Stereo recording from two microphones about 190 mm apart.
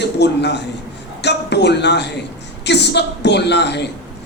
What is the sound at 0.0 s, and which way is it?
Speech, 65° left (ahead or behind).